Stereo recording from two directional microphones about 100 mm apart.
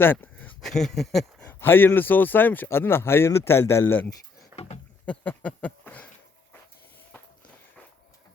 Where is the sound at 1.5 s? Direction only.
20° left (ahead or behind).